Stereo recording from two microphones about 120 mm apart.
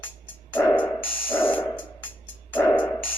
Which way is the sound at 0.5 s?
20° left (ahead or behind).